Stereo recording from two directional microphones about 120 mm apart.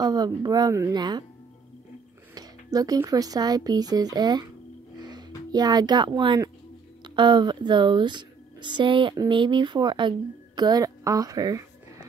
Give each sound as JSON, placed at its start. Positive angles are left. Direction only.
{"t": 0.0, "sound": "a woman's voice", "side_deg": -35}
{"t": 0.9, "sound": "a woman's voice", "side_deg": -35}
{"t": 2.3, "sound": "a woman's voice", "side_deg": -30}